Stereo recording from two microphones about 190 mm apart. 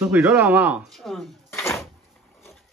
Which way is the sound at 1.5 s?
15° left (ahead or behind).